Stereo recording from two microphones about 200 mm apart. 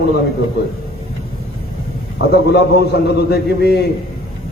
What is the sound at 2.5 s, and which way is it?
A man's voice, 55° left (ahead or behind).